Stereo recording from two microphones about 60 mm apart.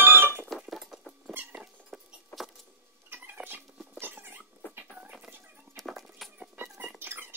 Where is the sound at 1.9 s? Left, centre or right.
Centre.